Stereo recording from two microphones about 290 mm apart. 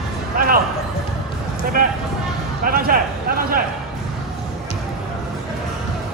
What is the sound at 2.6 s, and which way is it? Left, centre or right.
A man's voice, right.